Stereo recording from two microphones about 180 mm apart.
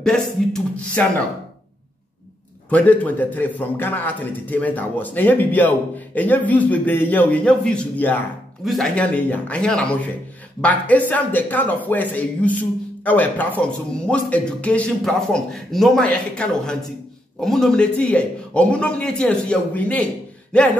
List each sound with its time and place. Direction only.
0.0 s speech: 5° left (ahead or behind)
2.7 s a man's voice: 5° left (ahead or behind)